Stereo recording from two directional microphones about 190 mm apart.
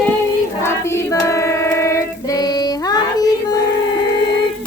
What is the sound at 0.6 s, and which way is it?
Child singing, 15° left (ahead or behind).